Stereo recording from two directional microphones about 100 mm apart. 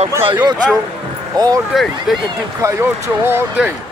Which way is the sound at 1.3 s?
40° right (ahead or behind).